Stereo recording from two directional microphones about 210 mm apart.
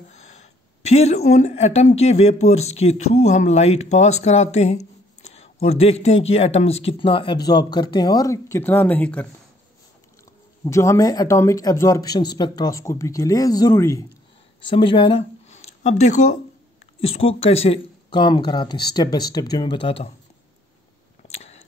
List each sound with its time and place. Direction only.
0.2 s a woman's voice: 35° left (ahead or behind); by 9.3 s 10° left (ahead or behind)
10.6 s speech: 15° left (ahead or behind)
21.3 s a sound: 30° left (ahead or behind)